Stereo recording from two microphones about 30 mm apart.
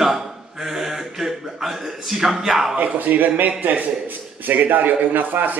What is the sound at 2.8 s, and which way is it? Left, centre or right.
Speech, right.